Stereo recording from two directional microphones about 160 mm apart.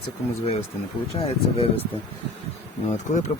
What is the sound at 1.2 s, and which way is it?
Speech, 35° left (ahead or behind).